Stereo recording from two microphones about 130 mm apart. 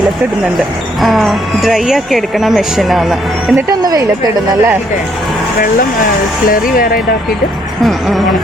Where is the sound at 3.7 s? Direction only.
30° right (ahead or behind).